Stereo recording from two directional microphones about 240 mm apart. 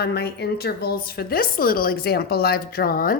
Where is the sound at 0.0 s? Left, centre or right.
Left.